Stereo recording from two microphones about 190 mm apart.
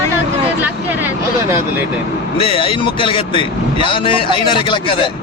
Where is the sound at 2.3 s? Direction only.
30° left (ahead or behind).